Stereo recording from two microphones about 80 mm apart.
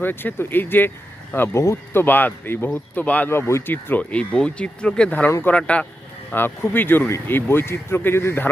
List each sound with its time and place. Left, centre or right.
0.0 s speech: left
1.5 s speech: left; by 3.2 s centre
3.2 s speech: left; by 5.8 s centre
6.3 s speech: left